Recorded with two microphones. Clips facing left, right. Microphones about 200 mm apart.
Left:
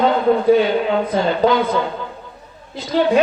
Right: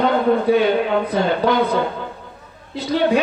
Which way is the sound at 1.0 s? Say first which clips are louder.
Left 1 dB; 60° right (ahead or behind).